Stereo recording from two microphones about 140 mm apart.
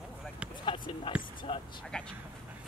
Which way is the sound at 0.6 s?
35° left (ahead or behind).